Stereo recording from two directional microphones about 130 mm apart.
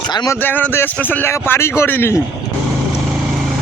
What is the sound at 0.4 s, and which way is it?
Speech, 15° left (ahead or behind).